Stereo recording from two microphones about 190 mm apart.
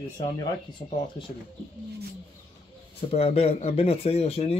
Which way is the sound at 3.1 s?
35° left (ahead or behind).